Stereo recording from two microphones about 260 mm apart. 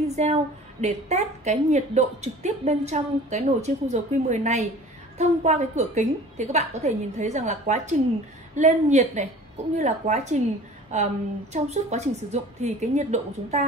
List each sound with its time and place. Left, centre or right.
0.1 s a woman's voice: right